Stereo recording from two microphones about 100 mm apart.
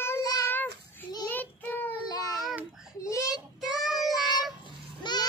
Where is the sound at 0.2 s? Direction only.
40° left (ahead or behind).